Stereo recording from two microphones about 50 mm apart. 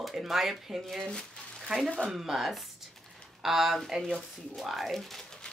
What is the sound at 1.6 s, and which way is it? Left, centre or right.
Speech, centre.